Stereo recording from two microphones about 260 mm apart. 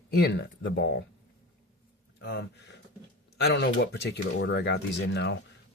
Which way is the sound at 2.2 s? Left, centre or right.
Left.